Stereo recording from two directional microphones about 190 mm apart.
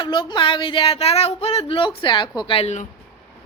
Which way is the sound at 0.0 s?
25° left (ahead or behind).